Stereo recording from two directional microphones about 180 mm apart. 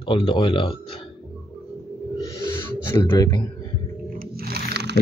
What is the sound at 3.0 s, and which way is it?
Speech, 20° left (ahead or behind).